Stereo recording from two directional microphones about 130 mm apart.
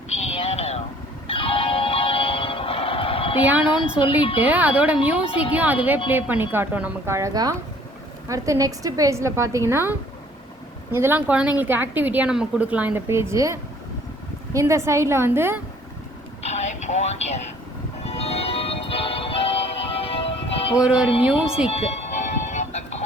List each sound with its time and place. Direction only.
0.2 s a sound: 55° left (ahead or behind)
1.3 s music: 45° left (ahead or behind)
3.4 s a woman's voice: 10° right (ahead or behind)
4.0 s speech: 40° left (ahead or behind)
4.4 s a woman's voice: 10° right (ahead or behind)
16.4 s train: 60° left (ahead or behind)
18.0 s music: 50° left (ahead or behind)
20.7 s a woman's voice: 5° right (ahead or behind)
21.7 s music: 55° left (ahead or behind)